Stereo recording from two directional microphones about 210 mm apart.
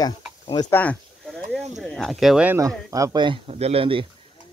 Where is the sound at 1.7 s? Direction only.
Centre (ahead or behind); by 4.1 s 25° right (ahead or behind).